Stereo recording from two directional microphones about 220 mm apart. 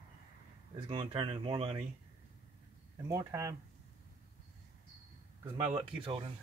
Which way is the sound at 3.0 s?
15° right (ahead or behind).